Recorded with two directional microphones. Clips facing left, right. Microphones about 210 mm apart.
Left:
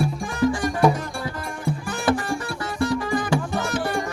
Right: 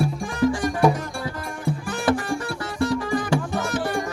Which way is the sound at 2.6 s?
30° right (ahead or behind).